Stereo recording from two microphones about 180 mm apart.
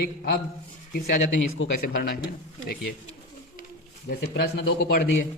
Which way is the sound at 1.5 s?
70° left (ahead or behind).